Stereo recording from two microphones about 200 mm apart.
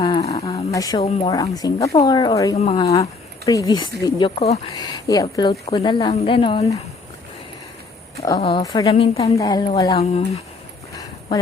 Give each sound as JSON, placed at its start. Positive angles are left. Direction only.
{"t": 0.0, "sound": "a sound", "side_deg": 25}
{"t": 0.5, "sound": "a sound", "side_deg": 15}
{"t": 1.3, "sound": "speech", "side_deg": 20}
{"t": 2.6, "sound": "speech", "side_deg": 30}
{"t": 2.9, "sound": "speech", "side_deg": 15}
{"t": 4.4, "sound": "speech", "side_deg": 30}
{"t": 4.7, "sound": "speech", "side_deg": 20}
{"t": 8.4, "sound": "speech", "side_deg": 30}
{"t": 10.0, "sound": "speech", "side_deg": 30}